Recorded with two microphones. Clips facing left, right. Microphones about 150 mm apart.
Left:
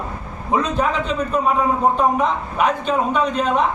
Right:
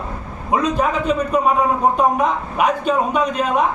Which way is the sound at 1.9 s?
10° right (ahead or behind).